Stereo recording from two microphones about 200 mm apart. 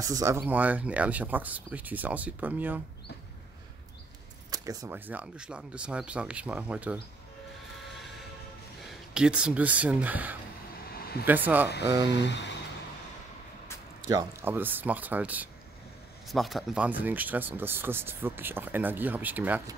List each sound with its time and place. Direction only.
0.0 s speech: 15° right (ahead or behind)
4.5 s speech: 15° right (ahead or behind)
9.1 s speech: 5° right (ahead or behind)
11.0 s a sound: 50° left (ahead or behind)
11.2 s speech: 10° right (ahead or behind)
11.8 s speech: 20° right (ahead or behind)
12.2 s a sound: 60° left (ahead or behind)
14.0 s speech: 15° right (ahead or behind)